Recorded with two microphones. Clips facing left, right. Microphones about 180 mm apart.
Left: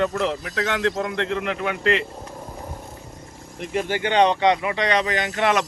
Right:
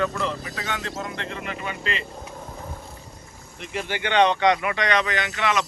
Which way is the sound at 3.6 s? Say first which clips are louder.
Left 5 dB; 45° left (ahead or behind).